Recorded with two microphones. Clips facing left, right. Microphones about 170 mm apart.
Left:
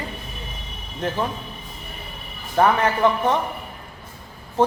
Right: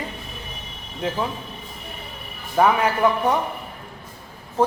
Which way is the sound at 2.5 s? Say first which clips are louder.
Even; 10° right (ahead or behind).